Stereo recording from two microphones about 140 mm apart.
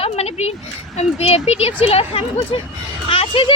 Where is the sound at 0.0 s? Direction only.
50° left (ahead or behind).